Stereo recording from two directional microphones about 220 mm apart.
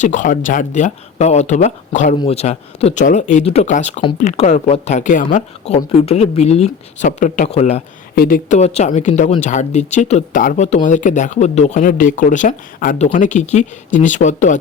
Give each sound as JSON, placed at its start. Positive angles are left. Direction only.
{"t": 0.0, "sound": "speech", "side_deg": 35}
{"t": 8.1, "sound": "speech", "side_deg": 40}